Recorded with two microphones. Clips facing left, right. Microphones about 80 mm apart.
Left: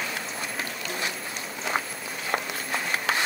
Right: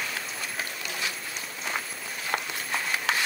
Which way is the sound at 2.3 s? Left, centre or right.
Left.